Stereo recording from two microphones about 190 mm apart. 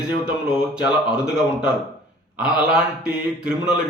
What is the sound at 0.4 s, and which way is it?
A man's voice, 5° right (ahead or behind).